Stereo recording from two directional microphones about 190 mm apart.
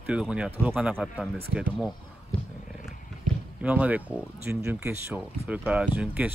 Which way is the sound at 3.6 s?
5° right (ahead or behind).